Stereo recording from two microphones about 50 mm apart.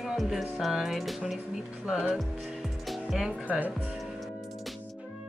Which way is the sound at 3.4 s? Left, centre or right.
Right.